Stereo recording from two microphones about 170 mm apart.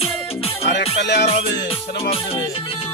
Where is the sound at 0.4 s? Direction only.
35° left (ahead or behind).